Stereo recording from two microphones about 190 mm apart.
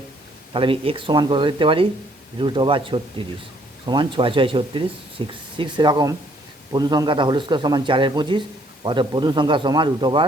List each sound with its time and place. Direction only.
0.5 s speech: 30° right (ahead or behind)